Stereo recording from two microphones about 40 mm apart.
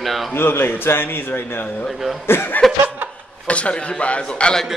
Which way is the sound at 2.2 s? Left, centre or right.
Left.